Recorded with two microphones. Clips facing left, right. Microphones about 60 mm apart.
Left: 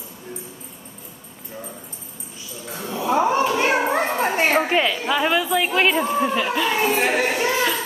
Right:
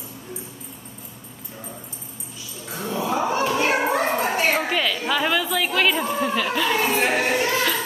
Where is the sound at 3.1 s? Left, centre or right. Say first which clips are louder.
Left 5 dB; left.